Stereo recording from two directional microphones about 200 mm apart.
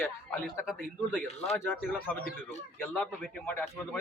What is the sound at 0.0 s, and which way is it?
Speech, 10° left (ahead or behind).